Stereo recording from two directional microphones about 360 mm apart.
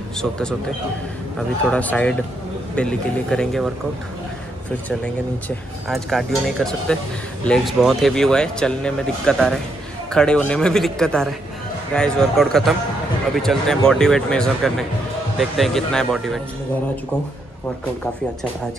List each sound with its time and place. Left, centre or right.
0.2 s speech: centre
1.6 s speech: centre
5.9 s speech: centre